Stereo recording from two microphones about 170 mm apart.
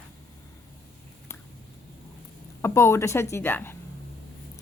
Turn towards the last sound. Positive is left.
turn(degrees=10)  # may be behind; listen again after turning